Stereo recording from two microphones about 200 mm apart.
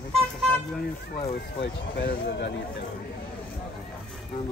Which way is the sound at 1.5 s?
55° left (ahead or behind).